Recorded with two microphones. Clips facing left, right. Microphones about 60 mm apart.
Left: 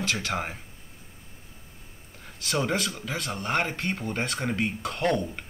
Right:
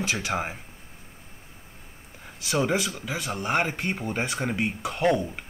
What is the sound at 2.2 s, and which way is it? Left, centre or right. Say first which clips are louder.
Speech: right 2 dB; centre.